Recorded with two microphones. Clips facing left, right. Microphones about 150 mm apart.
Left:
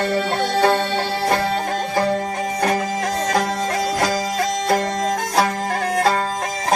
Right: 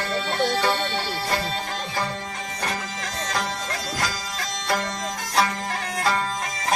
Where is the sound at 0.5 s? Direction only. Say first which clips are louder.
Left 7 dB; 55° left (ahead or behind).